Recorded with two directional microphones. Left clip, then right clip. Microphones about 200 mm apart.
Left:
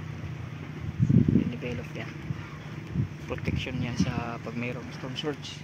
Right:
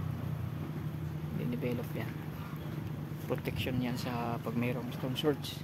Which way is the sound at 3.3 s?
10° right (ahead or behind).